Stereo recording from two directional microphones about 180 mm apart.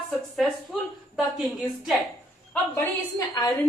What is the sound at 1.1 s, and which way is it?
Speech, centre (ahead or behind).